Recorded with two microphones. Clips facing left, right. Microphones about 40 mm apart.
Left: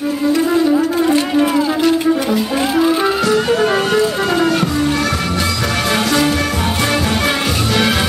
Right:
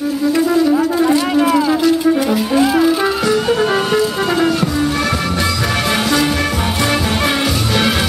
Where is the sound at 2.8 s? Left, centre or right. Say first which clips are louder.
Even; centre.